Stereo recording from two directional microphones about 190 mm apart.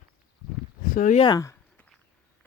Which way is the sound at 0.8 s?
45° left (ahead or behind).